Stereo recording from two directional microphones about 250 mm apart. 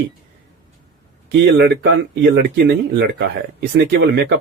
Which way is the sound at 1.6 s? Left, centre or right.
Right.